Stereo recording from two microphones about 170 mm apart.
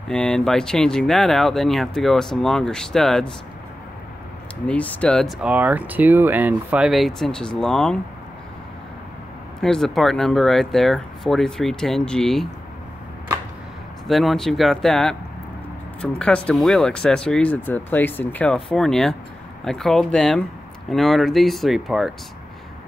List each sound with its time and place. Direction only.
0.1 s speech: 5° left (ahead or behind)
4.6 s speech: 5° left (ahead or behind)
9.6 s speech: centre (ahead or behind)
14.0 s speech: centre (ahead or behind)